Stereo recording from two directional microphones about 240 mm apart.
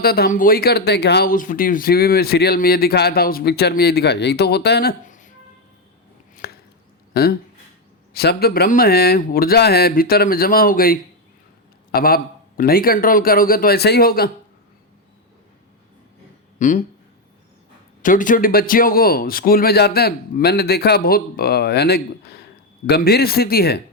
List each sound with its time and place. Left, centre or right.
0.0 s speech: left
6.3 s chopping: left
7.1 s speech: left
16.6 s speech: left
18.0 s speech: left